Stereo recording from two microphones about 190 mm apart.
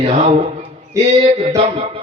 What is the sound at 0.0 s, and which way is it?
Speech, 35° right (ahead or behind).